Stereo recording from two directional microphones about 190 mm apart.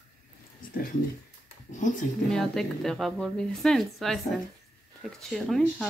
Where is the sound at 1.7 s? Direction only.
40° left (ahead or behind).